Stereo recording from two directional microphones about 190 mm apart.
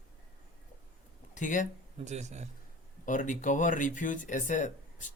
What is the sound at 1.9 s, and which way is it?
Speech, 35° right (ahead or behind).